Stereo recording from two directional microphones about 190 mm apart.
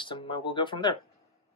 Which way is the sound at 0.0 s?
25° left (ahead or behind).